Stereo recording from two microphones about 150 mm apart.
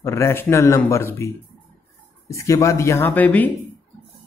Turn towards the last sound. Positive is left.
turn(degrees=10)  # may be behind; listen again after turning